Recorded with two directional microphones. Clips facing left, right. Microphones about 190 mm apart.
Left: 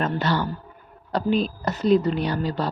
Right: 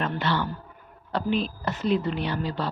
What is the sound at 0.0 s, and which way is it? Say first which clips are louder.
A woman's voice: left 3 dB; 40° left (ahead or behind).